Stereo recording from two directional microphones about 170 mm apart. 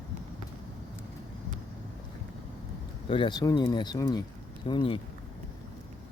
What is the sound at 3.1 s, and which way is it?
Speech, 25° left (ahead or behind).